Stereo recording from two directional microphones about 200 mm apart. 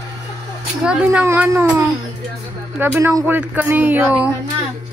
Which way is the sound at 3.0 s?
10° right (ahead or behind).